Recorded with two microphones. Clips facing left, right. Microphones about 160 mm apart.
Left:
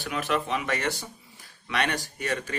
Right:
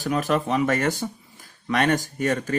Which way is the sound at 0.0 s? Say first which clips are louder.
Right 5 dB; 40° right (ahead or behind).